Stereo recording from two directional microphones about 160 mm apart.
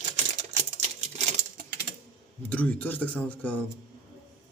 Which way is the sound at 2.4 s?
10° left (ahead or behind).